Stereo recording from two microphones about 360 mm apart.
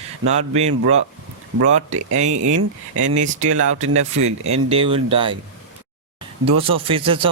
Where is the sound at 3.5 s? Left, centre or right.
Centre.